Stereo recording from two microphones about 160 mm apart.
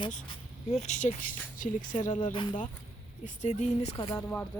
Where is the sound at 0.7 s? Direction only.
45° left (ahead or behind).